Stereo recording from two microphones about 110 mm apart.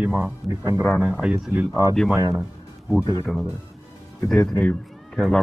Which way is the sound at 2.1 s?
25° right (ahead or behind).